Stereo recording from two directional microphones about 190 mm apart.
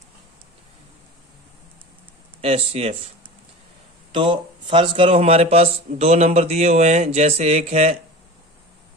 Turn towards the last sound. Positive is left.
turn(degrees=-35)  # may be behind; listen again after turning